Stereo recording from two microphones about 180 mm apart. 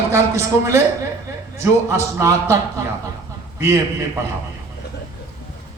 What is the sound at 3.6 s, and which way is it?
Speech, 15° right (ahead or behind).